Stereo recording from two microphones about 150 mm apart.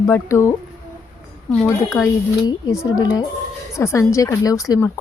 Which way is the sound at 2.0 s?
20° left (ahead or behind).